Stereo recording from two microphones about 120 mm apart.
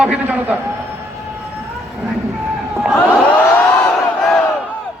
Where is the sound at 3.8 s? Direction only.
5° left (ahead or behind).